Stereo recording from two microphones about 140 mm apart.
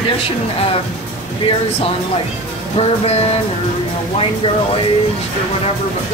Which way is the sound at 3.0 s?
45° left (ahead or behind).